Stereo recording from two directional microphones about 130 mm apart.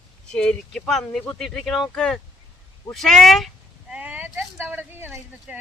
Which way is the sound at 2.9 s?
Centre (ahead or behind).